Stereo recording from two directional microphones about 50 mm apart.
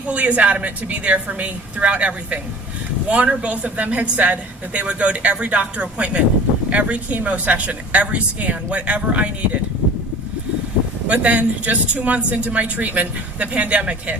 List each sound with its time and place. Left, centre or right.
0.1 s a woman's voice: right
11.1 s a woman's voice: right